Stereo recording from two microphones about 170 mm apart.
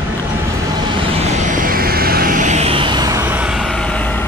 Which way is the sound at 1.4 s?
50° right (ahead or behind).